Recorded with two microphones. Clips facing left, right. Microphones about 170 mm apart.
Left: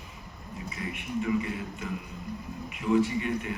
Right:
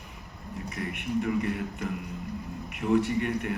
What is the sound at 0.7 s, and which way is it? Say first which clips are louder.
A man's voice: right 3 dB; 60° right (ahead or behind).